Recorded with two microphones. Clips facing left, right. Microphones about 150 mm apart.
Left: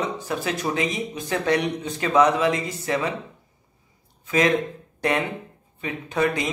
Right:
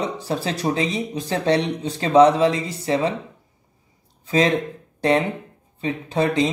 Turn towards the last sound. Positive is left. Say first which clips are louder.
# right 3 dB
turn(degrees=-30)  # may be behind; listen again after turning